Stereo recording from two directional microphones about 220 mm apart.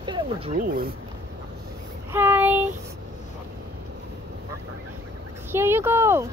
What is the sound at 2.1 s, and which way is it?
Speech, 10° right (ahead or behind).